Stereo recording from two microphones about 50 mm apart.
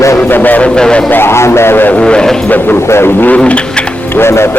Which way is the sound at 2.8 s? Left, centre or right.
Left.